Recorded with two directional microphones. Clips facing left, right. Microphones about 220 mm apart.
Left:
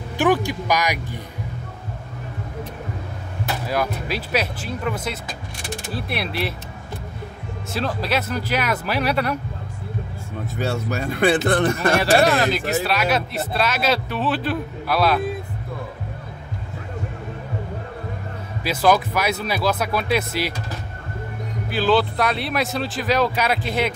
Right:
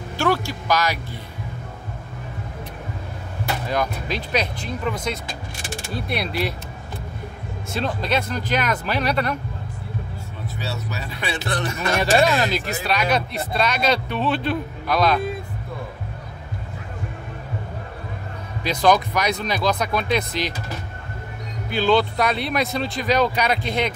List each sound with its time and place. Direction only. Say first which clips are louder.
0.2 s speech: left 3 dB; 15° left (ahead or behind)
3.6 s speech: left 1 dB; 5° left (ahead or behind)
7.7 s speech: even; 5° left (ahead or behind)
10.6 s speech: left 7 dB; 50° left (ahead or behind)
12.4 s speech: left 3 dB; centre (ahead or behind)
18.6 s speech: even; 5° left (ahead or behind)
21.6 s speech: even; 5° left (ahead or behind)